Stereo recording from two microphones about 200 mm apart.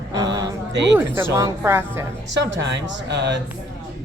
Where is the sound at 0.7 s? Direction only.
60° right (ahead or behind).